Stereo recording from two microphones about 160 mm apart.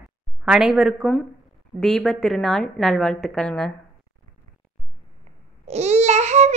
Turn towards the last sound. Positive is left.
turn(degrees=-45)  # may be behind; listen again after turning